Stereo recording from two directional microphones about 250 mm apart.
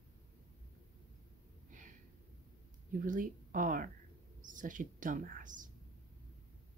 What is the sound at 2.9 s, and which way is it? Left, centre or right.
A woman's voice, right.